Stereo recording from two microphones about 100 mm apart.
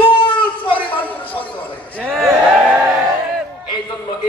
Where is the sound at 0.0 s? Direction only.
60° left (ahead or behind).